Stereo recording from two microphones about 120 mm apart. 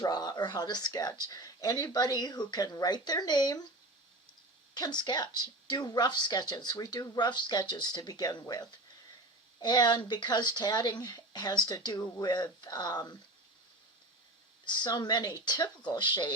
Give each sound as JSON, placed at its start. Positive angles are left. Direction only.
{"t": 0.0, "sound": "speech", "side_deg": 35}
{"t": 4.7, "sound": "speech", "side_deg": 35}
{"t": 14.6, "sound": "speech", "side_deg": 40}